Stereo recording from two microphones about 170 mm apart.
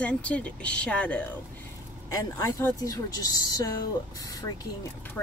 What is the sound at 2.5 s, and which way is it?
Speech, 20° left (ahead or behind).